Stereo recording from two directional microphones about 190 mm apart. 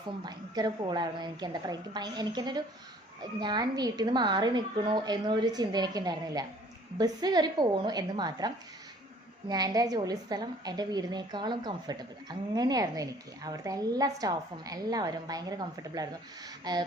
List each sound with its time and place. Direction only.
0.3 s a woman's voice: 20° right (ahead or behind)